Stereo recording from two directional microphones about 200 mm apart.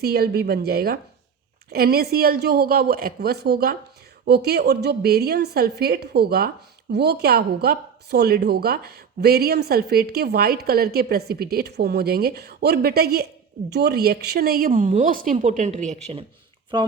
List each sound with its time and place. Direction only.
0.0 s a woman's voice: 50° right (ahead or behind); by 16.2 s 35° right (ahead or behind)
16.7 s speech: 25° right (ahead or behind)